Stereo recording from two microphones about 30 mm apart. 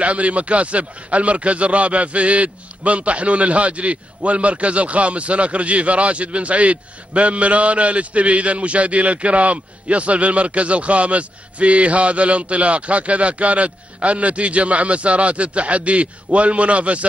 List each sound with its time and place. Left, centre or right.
0.0 s a man's voice: right